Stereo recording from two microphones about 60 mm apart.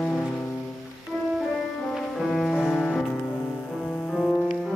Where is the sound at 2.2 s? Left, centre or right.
Centre.